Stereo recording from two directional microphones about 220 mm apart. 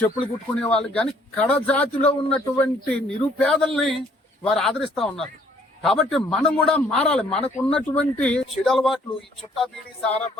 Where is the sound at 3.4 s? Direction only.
Centre (ahead or behind).